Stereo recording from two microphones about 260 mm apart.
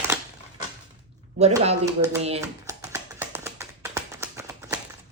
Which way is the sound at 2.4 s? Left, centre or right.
Centre.